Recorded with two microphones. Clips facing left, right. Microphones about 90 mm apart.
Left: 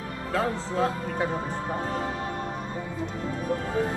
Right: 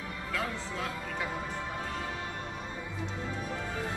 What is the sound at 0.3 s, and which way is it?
Speech, 35° left (ahead or behind).